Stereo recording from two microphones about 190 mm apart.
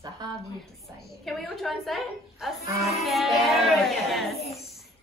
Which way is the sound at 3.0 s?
Centre (ahead or behind).